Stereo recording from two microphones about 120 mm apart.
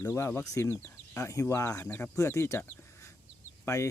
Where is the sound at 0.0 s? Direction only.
20° left (ahead or behind).